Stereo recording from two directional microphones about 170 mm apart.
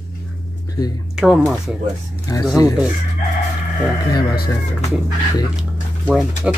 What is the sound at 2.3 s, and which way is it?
Speech, 20° left (ahead or behind).